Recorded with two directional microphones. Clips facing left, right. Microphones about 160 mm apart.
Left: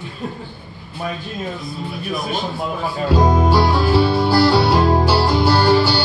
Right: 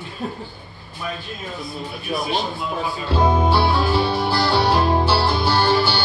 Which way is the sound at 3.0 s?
10° left (ahead or behind).